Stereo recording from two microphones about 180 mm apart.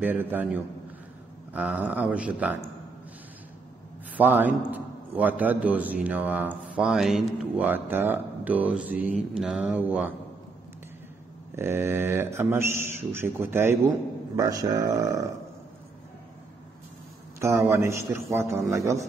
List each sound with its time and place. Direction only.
0.0 s a man's voice: 10° right (ahead or behind)
4.2 s a man's voice: 10° right (ahead or behind)
11.5 s a man's voice: 15° right (ahead or behind)
17.4 s a man's voice: 15° right (ahead or behind)